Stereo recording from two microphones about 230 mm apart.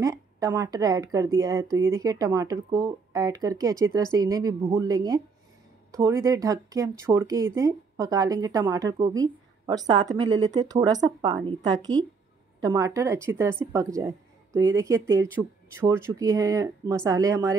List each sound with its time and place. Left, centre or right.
0.0 s speech: centre